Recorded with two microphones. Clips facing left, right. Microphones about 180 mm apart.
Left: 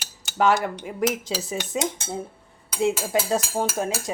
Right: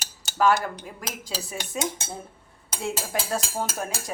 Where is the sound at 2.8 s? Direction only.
20° left (ahead or behind).